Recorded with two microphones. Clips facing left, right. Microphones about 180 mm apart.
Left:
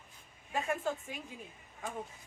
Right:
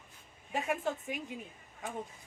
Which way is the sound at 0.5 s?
20° right (ahead or behind).